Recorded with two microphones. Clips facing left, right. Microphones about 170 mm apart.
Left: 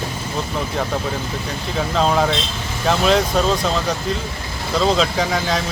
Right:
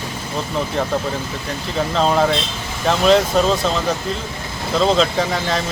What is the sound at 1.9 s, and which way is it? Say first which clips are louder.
Speech: right 1 dB; centre (ahead or behind).